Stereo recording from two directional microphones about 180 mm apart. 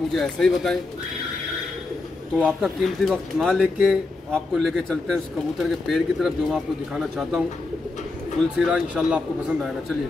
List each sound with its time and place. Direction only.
0.1 s speech: centre (ahead or behind)
2.3 s speech: 5° right (ahead or behind)
8.5 s speech: 5° right (ahead or behind)